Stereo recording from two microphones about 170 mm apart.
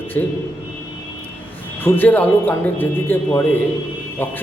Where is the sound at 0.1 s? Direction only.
10° left (ahead or behind).